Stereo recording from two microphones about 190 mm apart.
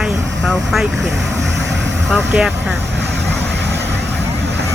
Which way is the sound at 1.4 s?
70° right (ahead or behind).